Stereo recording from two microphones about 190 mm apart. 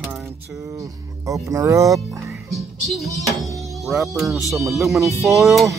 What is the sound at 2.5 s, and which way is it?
Music, centre (ahead or behind).